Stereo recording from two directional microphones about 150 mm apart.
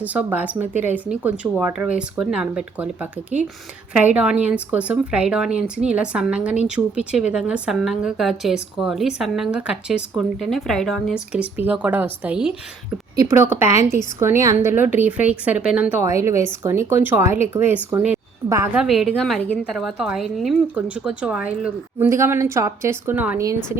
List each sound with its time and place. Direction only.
0.0 s speech: 10° right (ahead or behind)
13.1 s a woman's voice: 15° right (ahead or behind)
16.0 s speech: 20° right (ahead or behind)
18.9 s speech: centre (ahead or behind)
21.9 s speech: 20° right (ahead or behind)